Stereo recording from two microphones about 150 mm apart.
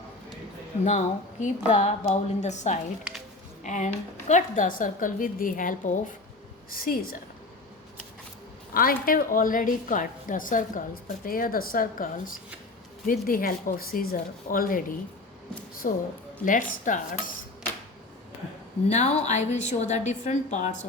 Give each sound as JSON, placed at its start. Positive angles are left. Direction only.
{"t": 0.9, "sound": "a woman's voice", "side_deg": 55}
{"t": 6.7, "sound": "speech", "side_deg": 75}
{"t": 8.7, "sound": "a woman's voice", "side_deg": 75}
{"t": 11.3, "sound": "a woman's voice", "side_deg": 75}
{"t": 18.9, "sound": "a woman's voice", "side_deg": 50}